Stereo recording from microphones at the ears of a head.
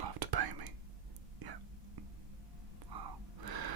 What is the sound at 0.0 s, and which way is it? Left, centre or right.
Whispering, right.